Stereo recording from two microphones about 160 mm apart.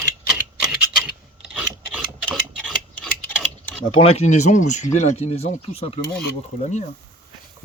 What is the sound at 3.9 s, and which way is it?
Speech, 35° left (ahead or behind).